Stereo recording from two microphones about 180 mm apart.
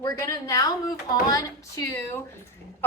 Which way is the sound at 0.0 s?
20° left (ahead or behind).